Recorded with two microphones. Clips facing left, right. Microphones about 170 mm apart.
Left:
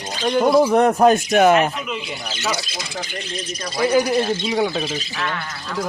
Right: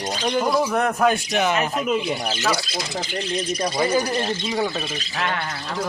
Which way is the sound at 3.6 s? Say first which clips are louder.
Right 1 dB; 20° right (ahead or behind).